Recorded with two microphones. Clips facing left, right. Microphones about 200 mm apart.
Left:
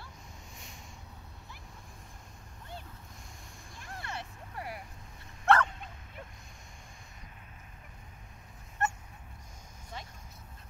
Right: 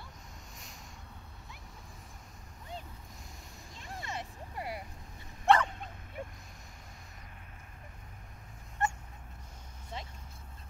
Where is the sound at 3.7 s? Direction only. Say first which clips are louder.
Right 1 dB; 20° right (ahead or behind).